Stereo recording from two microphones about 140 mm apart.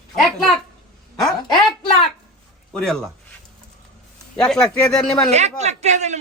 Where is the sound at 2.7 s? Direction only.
5° left (ahead or behind).